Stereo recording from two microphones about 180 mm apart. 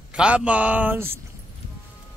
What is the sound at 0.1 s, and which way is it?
A man's voice, 5° right (ahead or behind).